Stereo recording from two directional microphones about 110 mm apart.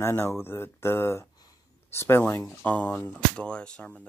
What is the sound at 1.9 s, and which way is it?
Speech, 20° left (ahead or behind).